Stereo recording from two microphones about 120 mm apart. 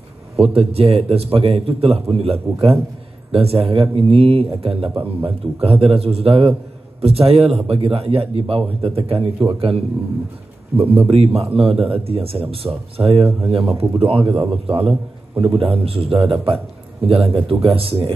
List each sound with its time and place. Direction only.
0.4 s a man's voice: 55° right (ahead or behind)
10.8 s a man's voice: 55° right (ahead or behind)